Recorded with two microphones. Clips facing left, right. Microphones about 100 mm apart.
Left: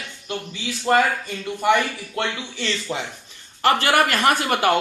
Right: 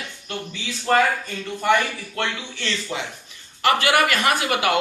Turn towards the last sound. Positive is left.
turn(degrees=40)  # may be behind; listen again after turning